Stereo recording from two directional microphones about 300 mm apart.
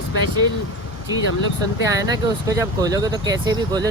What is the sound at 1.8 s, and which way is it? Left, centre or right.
Speech, centre.